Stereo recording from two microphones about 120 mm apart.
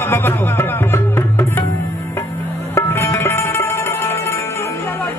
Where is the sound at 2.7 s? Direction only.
20° left (ahead or behind).